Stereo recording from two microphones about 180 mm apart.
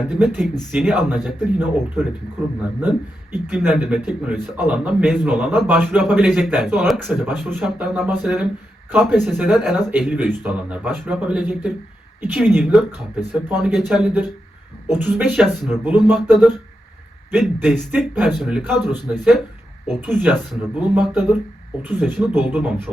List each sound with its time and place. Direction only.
0.0 s a man's voice: 5° right (ahead or behind)
3.3 s a man's voice: 5° right (ahead or behind)
17.6 s a man's voice: 5° right (ahead or behind)